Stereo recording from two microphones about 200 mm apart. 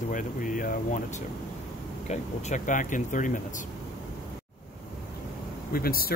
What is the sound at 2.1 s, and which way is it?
Speech, 35° left (ahead or behind).